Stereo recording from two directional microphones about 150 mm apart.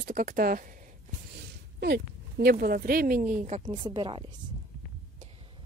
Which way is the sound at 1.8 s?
90° right.